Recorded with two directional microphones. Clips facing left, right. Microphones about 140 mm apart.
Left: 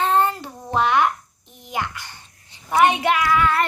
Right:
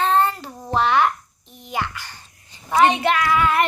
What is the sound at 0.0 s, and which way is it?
Child singing, 15° left (ahead or behind).